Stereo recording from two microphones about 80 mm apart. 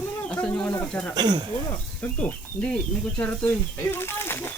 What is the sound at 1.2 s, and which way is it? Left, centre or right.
Speech, right.